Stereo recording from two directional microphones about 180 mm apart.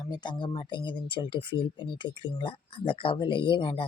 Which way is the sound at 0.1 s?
25° left (ahead or behind).